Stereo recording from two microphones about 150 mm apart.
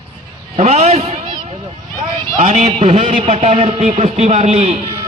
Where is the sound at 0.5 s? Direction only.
45° right (ahead or behind).